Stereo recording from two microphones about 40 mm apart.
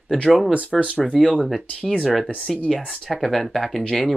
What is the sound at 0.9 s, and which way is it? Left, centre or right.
Speech, centre.